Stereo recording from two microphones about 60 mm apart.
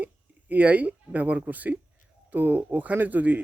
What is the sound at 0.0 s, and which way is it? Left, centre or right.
A man's voice, right.